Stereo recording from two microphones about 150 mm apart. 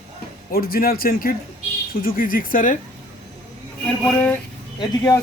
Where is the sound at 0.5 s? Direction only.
85° left; by 2.7 s 65° left (ahead or behind).